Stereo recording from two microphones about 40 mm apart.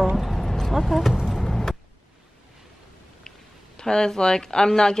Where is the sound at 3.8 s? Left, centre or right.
Centre.